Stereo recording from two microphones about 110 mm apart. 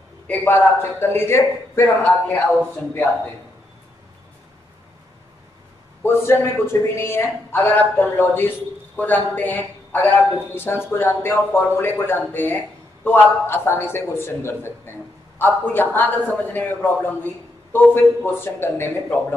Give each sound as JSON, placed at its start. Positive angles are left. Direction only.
{"t": 0.5, "sound": "a man's voice", "side_deg": 20}
{"t": 6.0, "sound": "a man's voice", "side_deg": 20}